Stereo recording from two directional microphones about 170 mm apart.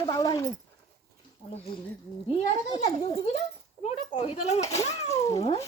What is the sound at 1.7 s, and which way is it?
Speech, 30° left (ahead or behind).